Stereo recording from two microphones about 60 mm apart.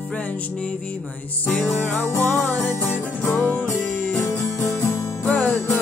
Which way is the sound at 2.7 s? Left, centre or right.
Left.